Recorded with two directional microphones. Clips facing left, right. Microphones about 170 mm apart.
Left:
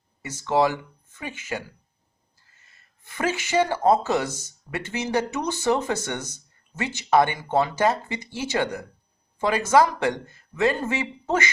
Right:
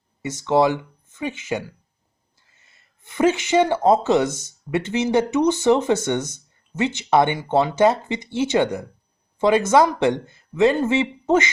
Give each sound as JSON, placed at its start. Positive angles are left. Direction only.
{"t": 0.2, "sound": "speech", "side_deg": -20}
{"t": 3.0, "sound": "speech", "side_deg": -20}